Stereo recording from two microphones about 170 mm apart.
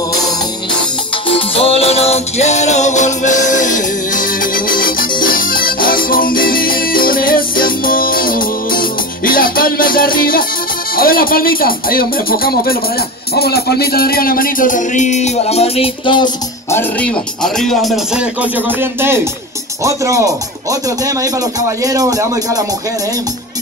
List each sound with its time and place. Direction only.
1.3 s music: 35° left (ahead or behind); by 10.4 s 55° left (ahead or behind)
11.0 s speech: 60° left (ahead or behind)
13.3 s music: 65° left (ahead or behind); by 16.3 s 30° left (ahead or behind)
16.7 s speech: 5° left (ahead or behind); by 22.6 s 20° right (ahead or behind)